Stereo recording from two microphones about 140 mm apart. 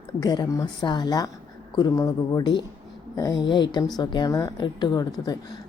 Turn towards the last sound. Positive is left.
turn(degrees=30)  # may be behind; listen again after turning